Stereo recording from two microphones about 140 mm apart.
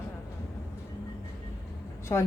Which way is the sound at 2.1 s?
20° left (ahead or behind).